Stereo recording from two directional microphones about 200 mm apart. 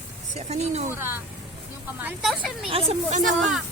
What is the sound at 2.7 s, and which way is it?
Speech, 30° right (ahead or behind).